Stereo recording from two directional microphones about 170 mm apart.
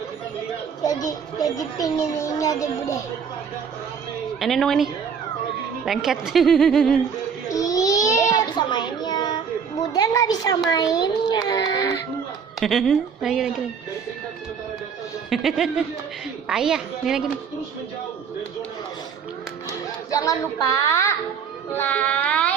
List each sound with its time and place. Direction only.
0.9 s a child's voice: 20° left (ahead or behind)
4.4 s a woman's voice: centre (ahead or behind)
7.4 s baby cry: 20° left (ahead or behind)
8.3 s child singing: 25° left (ahead or behind)
9.9 s a child's voice: 20° left (ahead or behind)
12.5 s a woman's voice: centre (ahead or behind)
15.3 s a man's voice: centre (ahead or behind)
20.1 s a child's voice: 20° left (ahead or behind)
21.7 s music: 10° left (ahead or behind)